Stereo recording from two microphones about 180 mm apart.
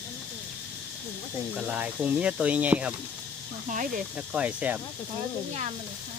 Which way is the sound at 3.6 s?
45° right (ahead or behind).